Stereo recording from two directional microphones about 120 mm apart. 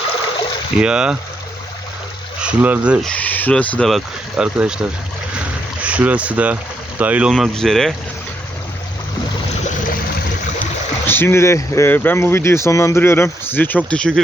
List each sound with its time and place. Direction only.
0.8 s speech: 5° right (ahead or behind)
2.4 s speech: 10° right (ahead or behind)
3.0 s speech: 10° left (ahead or behind)
3.8 s speech: 5° right (ahead or behind)
11.0 s speech: 20° left (ahead or behind)